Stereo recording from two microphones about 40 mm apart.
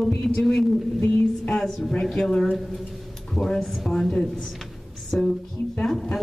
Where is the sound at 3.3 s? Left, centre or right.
Centre.